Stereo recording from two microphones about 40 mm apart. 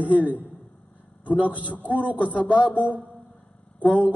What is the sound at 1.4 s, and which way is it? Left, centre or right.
Speech, right.